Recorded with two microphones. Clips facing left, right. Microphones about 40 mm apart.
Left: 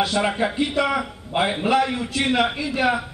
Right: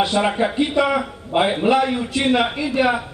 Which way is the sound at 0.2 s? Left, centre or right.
Centre.